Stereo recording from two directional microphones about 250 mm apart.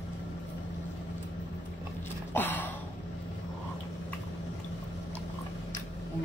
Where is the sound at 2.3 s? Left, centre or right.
Centre.